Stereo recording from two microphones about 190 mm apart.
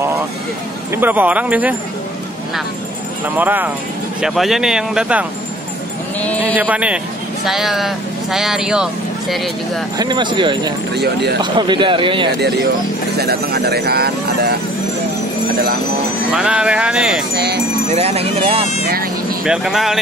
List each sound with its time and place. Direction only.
0.9 s speech: 10° right (ahead or behind)
3.3 s speech: 10° right (ahead or behind)
6.6 s speech: 5° right (ahead or behind)
9.9 s speech: 25° right (ahead or behind)
12.4 s speech: 60° right (ahead or behind)
16.3 s speech: 5° right (ahead or behind)
17.9 s speech: 35° right (ahead or behind)
19.4 s speech: 5° right (ahead or behind)